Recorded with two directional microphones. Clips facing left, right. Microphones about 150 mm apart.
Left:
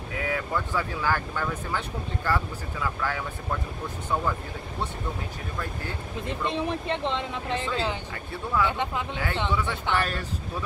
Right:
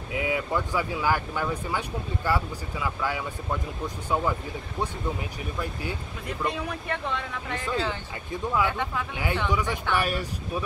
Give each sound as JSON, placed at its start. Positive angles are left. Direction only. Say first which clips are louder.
{"t": 0.1, "sound": "speech", "louder": "right 2 dB", "side_deg": -15}
{"t": 6.2, "sound": "speech", "louder": "left 2 dB", "side_deg": 25}
{"t": 8.6, "sound": "speech", "louder": "left 1 dB", "side_deg": 20}
{"t": 9.1, "sound": "speech", "louder": "right 1 dB", "side_deg": -15}